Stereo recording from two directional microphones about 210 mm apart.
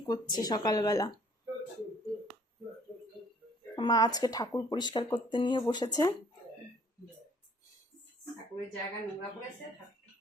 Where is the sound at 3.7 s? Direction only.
20° left (ahead or behind).